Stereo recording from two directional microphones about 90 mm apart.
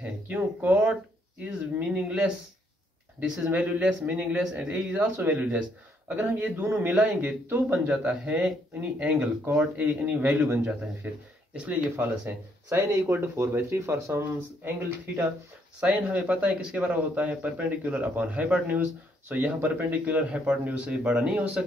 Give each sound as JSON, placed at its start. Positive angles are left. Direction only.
{"t": 0.0, "sound": "speech", "side_deg": -15}
{"t": 1.4, "sound": "a man's voice", "side_deg": -10}
{"t": 15.8, "sound": "a man's voice", "side_deg": -15}